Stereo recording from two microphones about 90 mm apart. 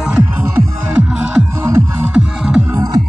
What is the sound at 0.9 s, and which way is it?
Music, 10° right (ahead or behind).